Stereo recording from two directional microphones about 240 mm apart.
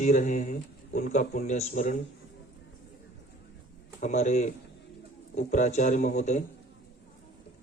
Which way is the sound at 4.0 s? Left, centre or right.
Left.